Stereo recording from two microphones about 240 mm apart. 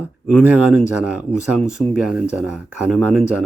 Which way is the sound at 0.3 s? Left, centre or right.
Centre.